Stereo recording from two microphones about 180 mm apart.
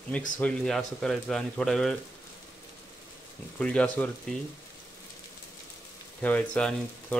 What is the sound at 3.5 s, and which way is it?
Speech, 5° left (ahead or behind).